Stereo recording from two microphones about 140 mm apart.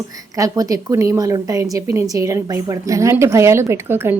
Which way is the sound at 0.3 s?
25° right (ahead or behind).